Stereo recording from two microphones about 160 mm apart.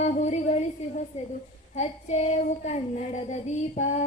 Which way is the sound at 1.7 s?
45° left (ahead or behind).